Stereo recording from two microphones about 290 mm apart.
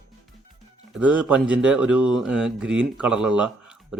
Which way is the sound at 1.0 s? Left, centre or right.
Centre.